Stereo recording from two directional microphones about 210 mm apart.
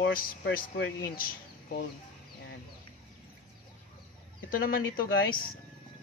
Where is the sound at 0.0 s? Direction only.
45° left (ahead or behind).